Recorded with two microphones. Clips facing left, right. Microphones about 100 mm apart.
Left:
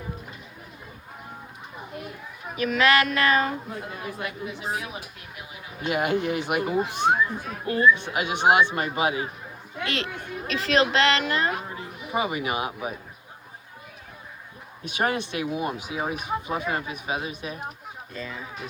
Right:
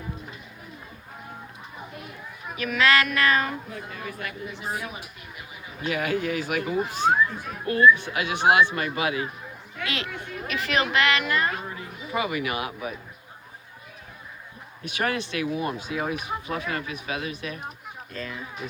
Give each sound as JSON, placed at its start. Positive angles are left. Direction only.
{"t": 2.6, "sound": "speech", "side_deg": 25}
{"t": 5.8, "sound": "speech", "side_deg": 25}
{"t": 14.8, "sound": "speech", "side_deg": 20}
{"t": 18.1, "sound": "speech", "side_deg": 10}